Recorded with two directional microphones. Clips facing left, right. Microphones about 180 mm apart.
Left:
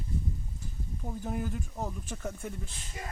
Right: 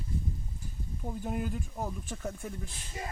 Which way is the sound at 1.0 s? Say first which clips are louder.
Right 1 dB; 10° right (ahead or behind).